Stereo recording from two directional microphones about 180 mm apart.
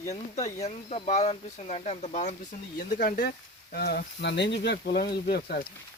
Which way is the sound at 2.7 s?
55° left (ahead or behind).